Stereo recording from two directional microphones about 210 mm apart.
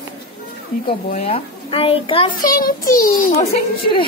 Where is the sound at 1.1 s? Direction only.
30° left (ahead or behind).